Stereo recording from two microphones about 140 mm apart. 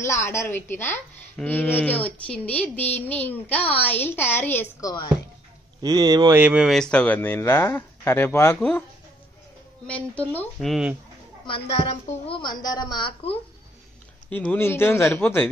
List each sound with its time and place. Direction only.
0.0 s a woman's voice: 20° left (ahead or behind)
5.8 s speech: 30° right (ahead or behind)
6.3 s a woman's voice: 10° right (ahead or behind); by 8.8 s 10° left (ahead or behind)
9.8 s speech: 10° left (ahead or behind)
11.4 s a woman's voice: 40° left (ahead or behind)
14.3 s a woman's voice: 10° left (ahead or behind)